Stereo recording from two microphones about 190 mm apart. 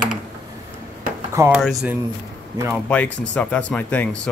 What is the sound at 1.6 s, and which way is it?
Speech, centre (ahead or behind).